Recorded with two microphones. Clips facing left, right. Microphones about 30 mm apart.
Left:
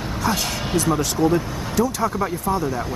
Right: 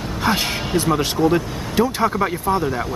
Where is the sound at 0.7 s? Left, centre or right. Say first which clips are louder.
Right 1 dB; right.